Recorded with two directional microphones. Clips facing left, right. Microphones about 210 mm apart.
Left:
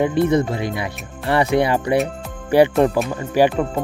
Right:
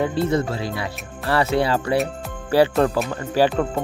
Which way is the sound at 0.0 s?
20° left (ahead or behind).